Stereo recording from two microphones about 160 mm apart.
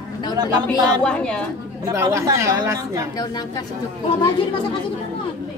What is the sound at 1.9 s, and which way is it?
A woman's voice, 20° right (ahead or behind).